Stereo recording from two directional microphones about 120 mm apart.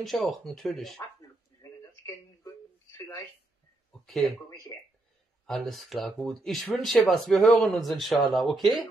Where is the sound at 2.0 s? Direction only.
25° left (ahead or behind).